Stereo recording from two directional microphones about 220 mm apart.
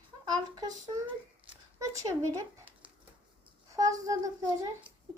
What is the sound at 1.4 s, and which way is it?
Crumpling, 15° right (ahead or behind).